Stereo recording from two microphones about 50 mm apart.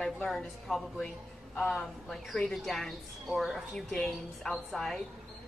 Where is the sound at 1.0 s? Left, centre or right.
Centre.